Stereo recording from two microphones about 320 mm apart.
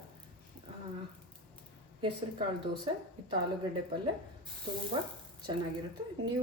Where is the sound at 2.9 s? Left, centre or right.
Centre.